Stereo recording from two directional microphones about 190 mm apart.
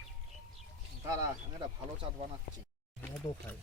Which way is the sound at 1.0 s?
20° right (ahead or behind).